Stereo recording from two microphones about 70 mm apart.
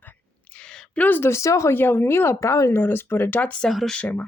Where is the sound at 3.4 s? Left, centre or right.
Centre.